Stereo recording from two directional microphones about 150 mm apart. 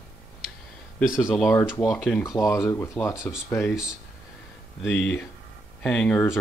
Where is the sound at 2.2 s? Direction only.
20° left (ahead or behind).